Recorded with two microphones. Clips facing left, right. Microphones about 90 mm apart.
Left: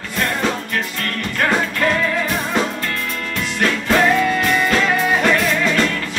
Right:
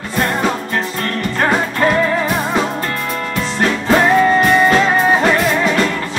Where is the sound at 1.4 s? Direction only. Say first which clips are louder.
Right 3 dB; 30° right (ahead or behind).